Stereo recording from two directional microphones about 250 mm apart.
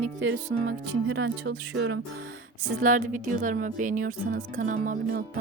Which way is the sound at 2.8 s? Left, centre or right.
Right.